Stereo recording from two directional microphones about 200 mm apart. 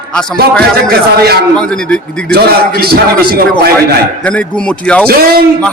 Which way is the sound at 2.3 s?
50° right (ahead or behind).